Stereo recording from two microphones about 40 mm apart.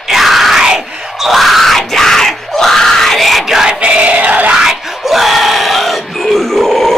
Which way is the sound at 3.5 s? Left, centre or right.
Centre.